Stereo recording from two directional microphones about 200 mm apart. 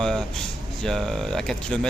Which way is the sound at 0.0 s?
Centre (ahead or behind).